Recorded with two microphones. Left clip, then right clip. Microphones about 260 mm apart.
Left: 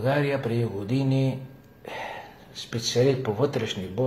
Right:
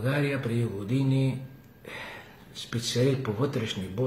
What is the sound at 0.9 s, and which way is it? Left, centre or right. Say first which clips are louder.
Speech: left 2 dB; left.